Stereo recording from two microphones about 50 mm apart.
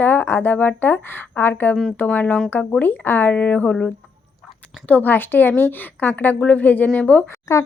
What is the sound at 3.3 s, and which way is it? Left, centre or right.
Speech, left.